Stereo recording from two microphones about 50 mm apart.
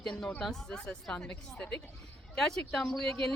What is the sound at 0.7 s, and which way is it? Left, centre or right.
Speech, centre.